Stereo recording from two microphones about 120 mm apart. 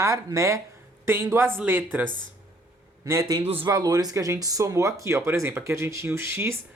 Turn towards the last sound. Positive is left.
turn(degrees=-20)  # may be behind; listen again after turning